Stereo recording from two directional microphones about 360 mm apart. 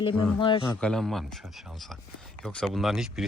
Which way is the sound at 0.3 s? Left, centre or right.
Centre.